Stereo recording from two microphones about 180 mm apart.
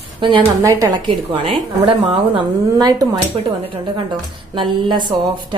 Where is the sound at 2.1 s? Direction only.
25° right (ahead or behind).